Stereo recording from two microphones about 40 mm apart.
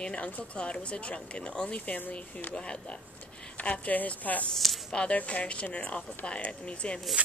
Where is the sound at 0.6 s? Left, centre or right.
Left.